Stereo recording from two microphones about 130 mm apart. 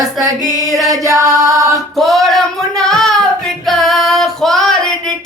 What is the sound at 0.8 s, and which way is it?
Singing, 25° right (ahead or behind).